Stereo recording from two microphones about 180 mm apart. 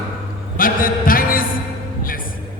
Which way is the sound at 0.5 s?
50° left (ahead or behind).